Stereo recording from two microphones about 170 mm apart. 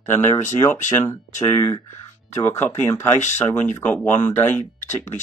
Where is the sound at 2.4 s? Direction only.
15° left (ahead or behind).